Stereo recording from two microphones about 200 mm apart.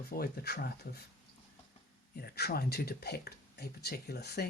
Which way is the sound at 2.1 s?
50° left (ahead or behind).